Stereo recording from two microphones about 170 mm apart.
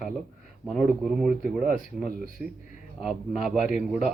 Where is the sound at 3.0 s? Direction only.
Centre (ahead or behind).